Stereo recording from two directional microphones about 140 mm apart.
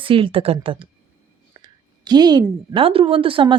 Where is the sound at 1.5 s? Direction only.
30° right (ahead or behind).